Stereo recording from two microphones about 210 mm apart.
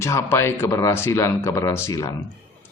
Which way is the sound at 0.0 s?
10° left (ahead or behind).